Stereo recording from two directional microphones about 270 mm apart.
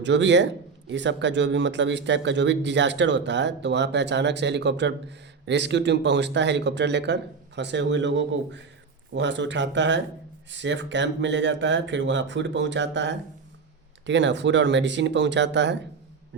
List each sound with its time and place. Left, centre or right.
0.0 s speech: right